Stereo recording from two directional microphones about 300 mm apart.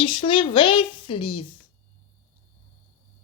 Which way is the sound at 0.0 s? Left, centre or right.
Centre.